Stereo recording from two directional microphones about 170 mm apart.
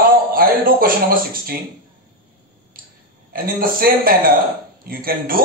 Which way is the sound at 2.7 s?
60° right (ahead or behind).